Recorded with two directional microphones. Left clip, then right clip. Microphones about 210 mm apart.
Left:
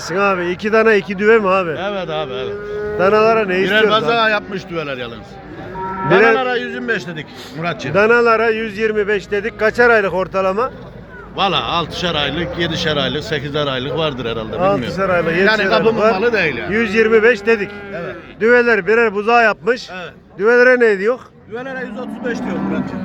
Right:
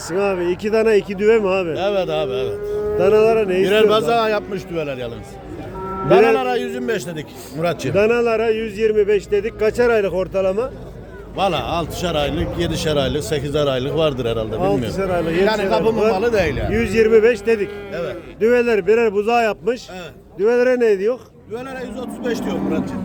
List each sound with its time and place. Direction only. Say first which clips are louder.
0.1 s a man's voice: left 3 dB; 10° right (ahead or behind)
1.7 s a man's voice: right 2 dB; 65° right (ahead or behind)
3.0 s a man's voice: left 2 dB; 15° right (ahead or behind)
3.6 s a man's voice: left 1 dB; 75° right (ahead or behind)
6.3 s a man's voice: left 2 dB; 75° right (ahead or behind)
7.9 s a man's voice: left 5 dB; 15° right (ahead or behind)
11.3 s a man's voice: left 3 dB; 55° right (ahead or behind)
14.9 s a man's voice: left 4 dB; 15° right (ahead or behind)
15.4 s a man's voice: left 5 dB; 65° right (ahead or behind)
16.7 s a man's voice: left 1 dB; 25° right (ahead or behind)
21.5 s speech: left 3 dB; 65° right (ahead or behind)